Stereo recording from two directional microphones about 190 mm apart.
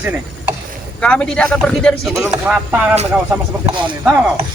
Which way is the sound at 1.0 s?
5° left (ahead or behind).